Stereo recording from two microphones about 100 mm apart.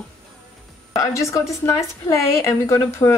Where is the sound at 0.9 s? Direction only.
35° left (ahead or behind).